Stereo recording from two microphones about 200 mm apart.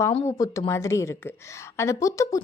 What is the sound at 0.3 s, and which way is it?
A woman's voice, 15° left (ahead or behind).